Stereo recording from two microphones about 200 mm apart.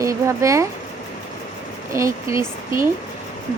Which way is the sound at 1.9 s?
15° right (ahead or behind).